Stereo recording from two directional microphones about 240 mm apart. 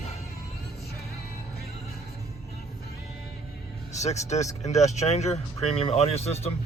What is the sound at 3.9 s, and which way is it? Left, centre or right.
Speech, left.